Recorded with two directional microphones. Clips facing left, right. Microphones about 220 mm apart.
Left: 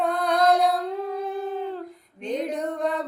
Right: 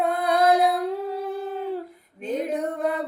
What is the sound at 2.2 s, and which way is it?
Music, 5° right (ahead or behind).